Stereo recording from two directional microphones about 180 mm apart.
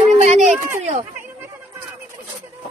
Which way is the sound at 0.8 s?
40° right (ahead or behind).